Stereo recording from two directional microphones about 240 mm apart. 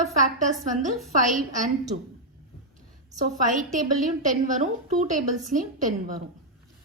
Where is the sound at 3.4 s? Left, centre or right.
Right.